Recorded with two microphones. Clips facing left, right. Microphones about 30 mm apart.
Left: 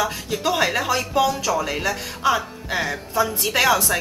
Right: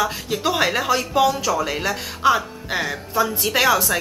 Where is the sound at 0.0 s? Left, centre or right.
Centre.